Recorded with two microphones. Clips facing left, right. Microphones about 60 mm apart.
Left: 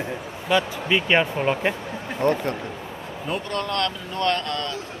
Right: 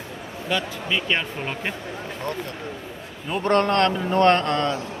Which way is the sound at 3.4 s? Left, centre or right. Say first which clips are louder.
Right 9 dB; right.